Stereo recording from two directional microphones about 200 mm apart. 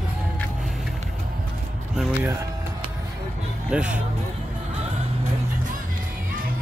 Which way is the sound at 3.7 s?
5° right (ahead or behind).